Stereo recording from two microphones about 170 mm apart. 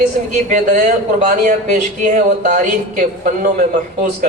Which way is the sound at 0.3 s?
45° right (ahead or behind).